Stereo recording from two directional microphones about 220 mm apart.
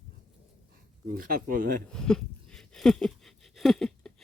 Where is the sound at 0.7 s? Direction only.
40° right (ahead or behind).